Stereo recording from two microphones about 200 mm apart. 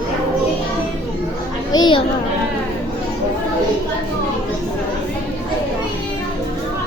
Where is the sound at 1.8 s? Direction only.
25° left (ahead or behind).